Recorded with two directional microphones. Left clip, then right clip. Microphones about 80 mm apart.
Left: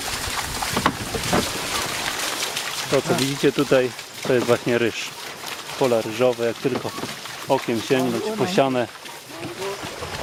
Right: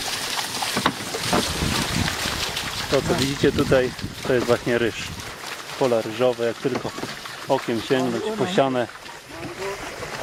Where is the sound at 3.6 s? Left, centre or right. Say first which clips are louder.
Left 1 dB; centre.